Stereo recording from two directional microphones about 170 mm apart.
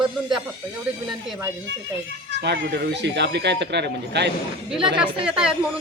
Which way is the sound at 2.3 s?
90° right.